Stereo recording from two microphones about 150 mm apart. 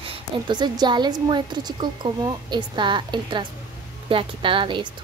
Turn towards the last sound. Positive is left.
turn(degrees=-35)  # may be behind; listen again after turning